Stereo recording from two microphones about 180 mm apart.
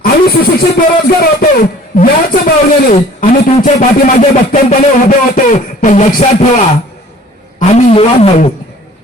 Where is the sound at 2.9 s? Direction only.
45° left (ahead or behind).